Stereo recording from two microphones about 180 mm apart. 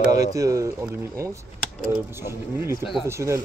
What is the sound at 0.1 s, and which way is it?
Speech, 20° right (ahead or behind).